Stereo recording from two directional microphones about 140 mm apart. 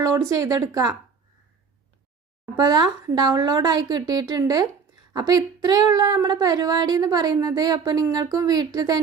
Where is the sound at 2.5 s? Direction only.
30° right (ahead or behind).